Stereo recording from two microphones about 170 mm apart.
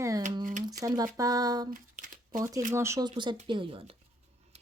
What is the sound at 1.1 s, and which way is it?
Speech, 20° right (ahead or behind).